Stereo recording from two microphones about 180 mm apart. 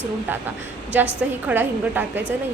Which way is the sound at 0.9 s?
10° right (ahead or behind).